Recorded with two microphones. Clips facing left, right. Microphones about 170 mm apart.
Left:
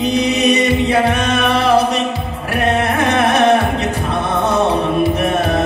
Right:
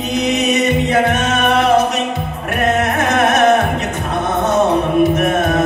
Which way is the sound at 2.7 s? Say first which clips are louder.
Even; 30° left (ahead or behind).